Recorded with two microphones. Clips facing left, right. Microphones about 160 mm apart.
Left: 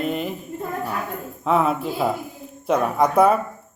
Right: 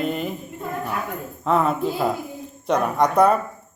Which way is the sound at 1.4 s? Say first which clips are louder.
Even; 5° left (ahead or behind).